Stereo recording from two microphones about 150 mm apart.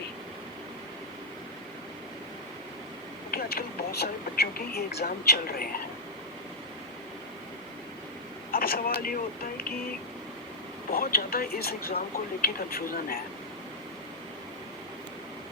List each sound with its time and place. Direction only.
3.3 s speech: 90° left
8.5 s speech: 80° left
10.9 s speech: 85° left